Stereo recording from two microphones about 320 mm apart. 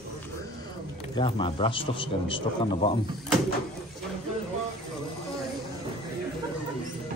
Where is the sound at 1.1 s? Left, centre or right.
Centre.